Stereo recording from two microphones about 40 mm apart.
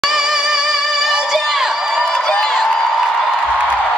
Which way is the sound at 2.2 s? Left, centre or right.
Centre.